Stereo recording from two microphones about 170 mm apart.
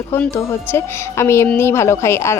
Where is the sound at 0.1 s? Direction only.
15° left (ahead or behind).